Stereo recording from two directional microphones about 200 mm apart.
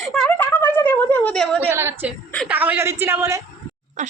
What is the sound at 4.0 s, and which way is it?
Speech, 40° right (ahead or behind).